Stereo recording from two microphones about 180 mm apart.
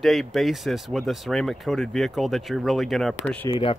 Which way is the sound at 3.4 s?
25° left (ahead or behind).